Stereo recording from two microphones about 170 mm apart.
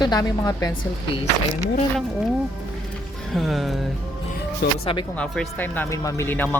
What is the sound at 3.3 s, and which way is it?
Speech, centre (ahead or behind).